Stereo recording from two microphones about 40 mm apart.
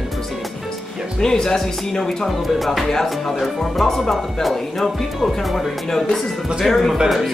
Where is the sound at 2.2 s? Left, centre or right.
Centre.